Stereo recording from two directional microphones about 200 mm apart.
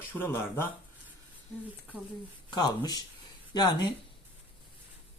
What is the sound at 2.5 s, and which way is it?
Speech, 20° left (ahead or behind).